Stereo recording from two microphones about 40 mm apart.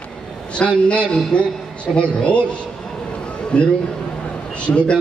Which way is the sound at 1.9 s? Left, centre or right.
Centre.